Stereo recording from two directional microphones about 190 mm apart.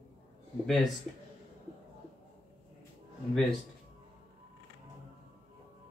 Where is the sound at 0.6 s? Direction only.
Centre (ahead or behind).